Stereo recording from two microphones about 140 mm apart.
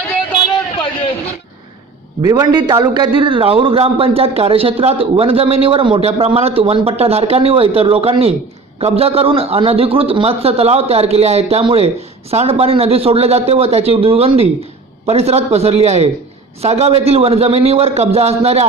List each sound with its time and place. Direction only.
2.2 s a man's voice: 25° right (ahead or behind); by 18.7 s 50° right (ahead or behind)